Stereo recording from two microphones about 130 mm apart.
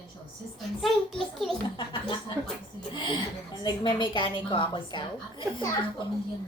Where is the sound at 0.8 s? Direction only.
Centre (ahead or behind).